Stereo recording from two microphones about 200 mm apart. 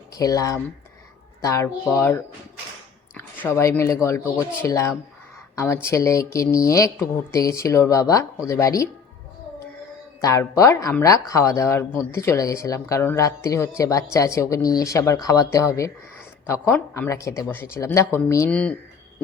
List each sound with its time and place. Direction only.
0.1 s a woman's voice: 15° left (ahead or behind)
10.2 s a woman's voice: 15° left (ahead or behind)